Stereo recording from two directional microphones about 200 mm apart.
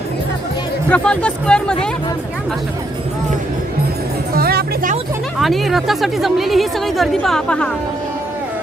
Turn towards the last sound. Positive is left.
turn(degrees=5)  # may be behind; listen again after turning